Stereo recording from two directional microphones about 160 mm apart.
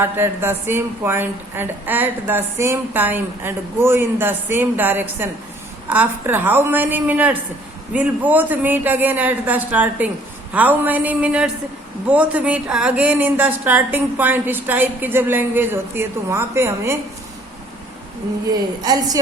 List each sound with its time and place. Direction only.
0.0 s a woman's voice: 15° right (ahead or behind)
18.5 s a woman's voice: 25° right (ahead or behind)